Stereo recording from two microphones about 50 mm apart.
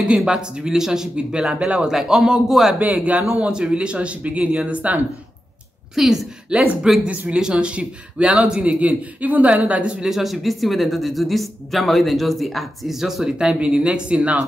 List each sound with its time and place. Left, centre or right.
0.1 s speech: centre
2.9 s a man's voice: right
5.9 s speech: centre
6.5 s a man's voice: centre
10.0 s speech: centre; by 14.4 s right